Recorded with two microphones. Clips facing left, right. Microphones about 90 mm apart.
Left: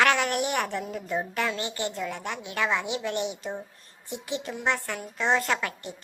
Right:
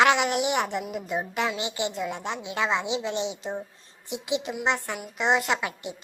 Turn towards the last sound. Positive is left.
turn(degrees=-20)  # may be behind; listen again after turning